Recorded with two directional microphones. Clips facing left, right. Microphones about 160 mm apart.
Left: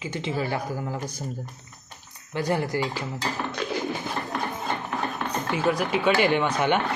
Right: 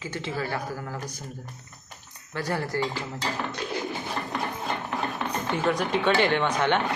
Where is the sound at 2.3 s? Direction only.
20° left (ahead or behind).